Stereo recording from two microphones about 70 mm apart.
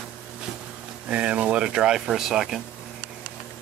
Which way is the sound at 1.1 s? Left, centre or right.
Centre.